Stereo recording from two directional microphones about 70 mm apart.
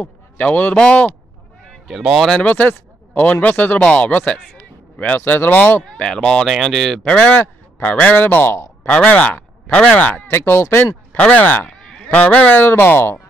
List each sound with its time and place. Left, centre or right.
0.4 s speech: left
1.9 s speech: centre
2.3 s speech: left; by 7.2 s centre
7.2 s speech: centre
8.8 s speech: centre
10.3 s speech: left
11.1 s speech: centre
11.8 s honk: centre
12.1 s speech: centre; by 13.2 s left